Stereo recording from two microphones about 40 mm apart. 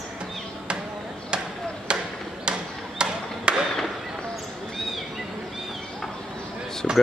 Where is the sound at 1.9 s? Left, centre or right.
Right.